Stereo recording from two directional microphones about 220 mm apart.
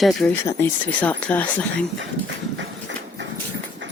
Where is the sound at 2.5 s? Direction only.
55° right (ahead or behind).